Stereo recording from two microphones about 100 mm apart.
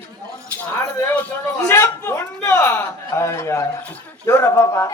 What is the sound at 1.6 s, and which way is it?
A man's voice, 20° left (ahead or behind).